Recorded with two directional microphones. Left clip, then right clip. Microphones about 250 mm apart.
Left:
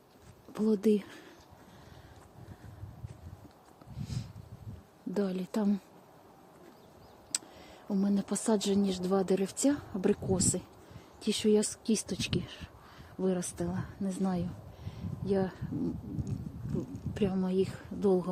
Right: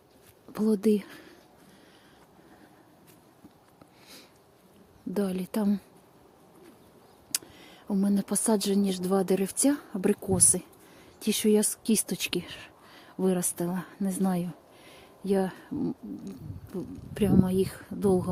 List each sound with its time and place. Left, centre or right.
0.5 s speech: centre
4.0 s a sound: centre
5.1 s speech: centre
7.3 s speech: centre